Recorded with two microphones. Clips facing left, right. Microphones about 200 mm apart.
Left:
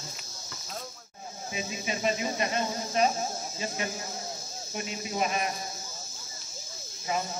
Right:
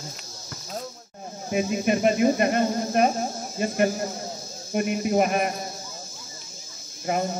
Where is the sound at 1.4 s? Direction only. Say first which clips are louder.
Right 12 dB; 55° right (ahead or behind).